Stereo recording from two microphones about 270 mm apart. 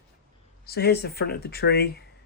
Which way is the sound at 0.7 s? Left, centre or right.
Left.